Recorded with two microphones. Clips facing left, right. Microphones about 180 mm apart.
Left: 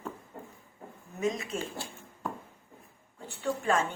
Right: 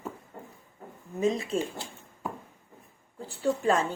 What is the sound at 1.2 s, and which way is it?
Speech, 30° right (ahead or behind).